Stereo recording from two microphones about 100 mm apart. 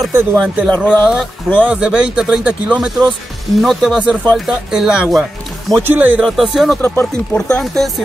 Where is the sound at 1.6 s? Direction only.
10° right (ahead or behind).